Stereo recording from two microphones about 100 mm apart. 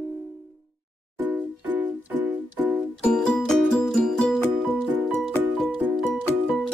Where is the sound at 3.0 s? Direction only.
10° left (ahead or behind).